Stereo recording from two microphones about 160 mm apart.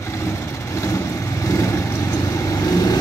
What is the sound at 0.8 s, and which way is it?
Vehicle, 20° left (ahead or behind).